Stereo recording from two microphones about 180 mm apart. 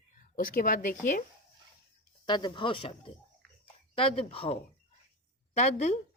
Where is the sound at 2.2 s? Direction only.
25° left (ahead or behind).